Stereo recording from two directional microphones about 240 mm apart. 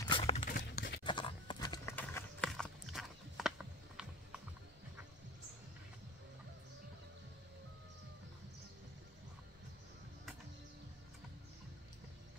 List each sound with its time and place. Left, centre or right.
0.1 s a sound: left
0.5 s clip-clop: left
1.0 s horse: centre
2.0 s clip-clop: centre